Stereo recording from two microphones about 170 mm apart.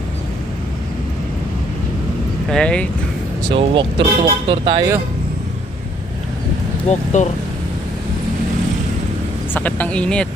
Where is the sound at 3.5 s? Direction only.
30° right (ahead or behind).